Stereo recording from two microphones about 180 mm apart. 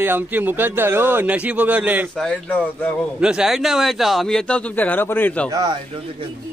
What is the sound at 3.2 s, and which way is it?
A man's voice, 5° right (ahead or behind).